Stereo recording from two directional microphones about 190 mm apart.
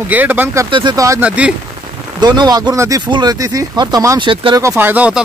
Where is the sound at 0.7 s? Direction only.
20° right (ahead or behind).